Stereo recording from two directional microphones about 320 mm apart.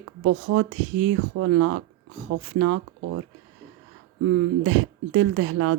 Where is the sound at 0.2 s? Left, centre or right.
Right.